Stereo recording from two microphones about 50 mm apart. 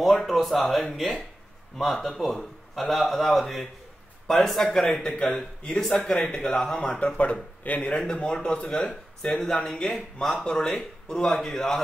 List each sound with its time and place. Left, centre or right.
0.2 s speech: centre
7.1 s speech: left
7.8 s speech: centre